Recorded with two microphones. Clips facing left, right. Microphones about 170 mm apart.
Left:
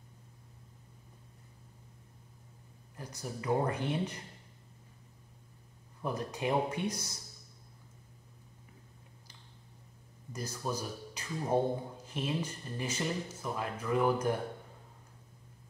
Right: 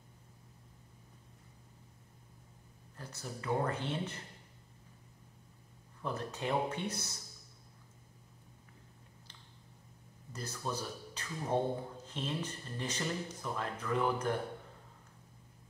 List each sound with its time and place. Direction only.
3.0 s speech: 15° left (ahead or behind)
6.0 s speech: 15° left (ahead or behind)
10.3 s speech: 10° left (ahead or behind)